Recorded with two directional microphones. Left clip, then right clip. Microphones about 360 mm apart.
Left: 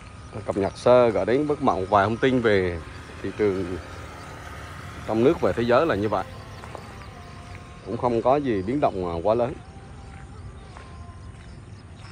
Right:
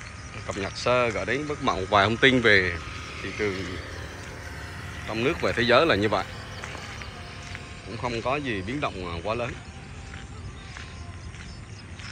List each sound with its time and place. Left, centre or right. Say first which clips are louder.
0.5 s speech: left 7 dB; centre
2.8 s vehicle: right 1 dB; left
3.5 s speech: left 4 dB; left
4.5 s speech: even; centre
7.9 s speech: left 7 dB; centre